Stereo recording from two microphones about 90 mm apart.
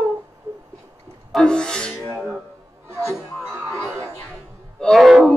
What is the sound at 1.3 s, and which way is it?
Music, 10° left (ahead or behind).